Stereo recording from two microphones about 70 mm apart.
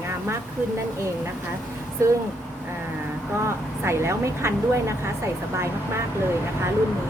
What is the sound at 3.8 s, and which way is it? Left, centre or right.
Speech, right.